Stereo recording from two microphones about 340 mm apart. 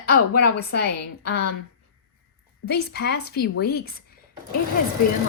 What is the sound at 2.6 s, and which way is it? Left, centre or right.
A woman's voice, left.